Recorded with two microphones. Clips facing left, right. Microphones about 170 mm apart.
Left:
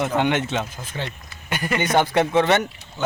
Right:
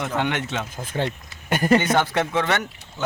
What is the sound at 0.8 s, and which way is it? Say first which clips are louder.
Speech: right 5 dB; 50° right (ahead or behind).